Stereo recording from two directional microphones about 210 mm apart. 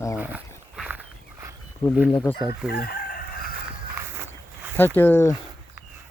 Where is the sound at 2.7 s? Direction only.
45° left (ahead or behind).